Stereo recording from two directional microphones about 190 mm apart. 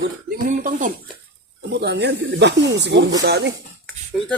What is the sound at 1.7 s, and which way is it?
Speech, 60° right (ahead or behind).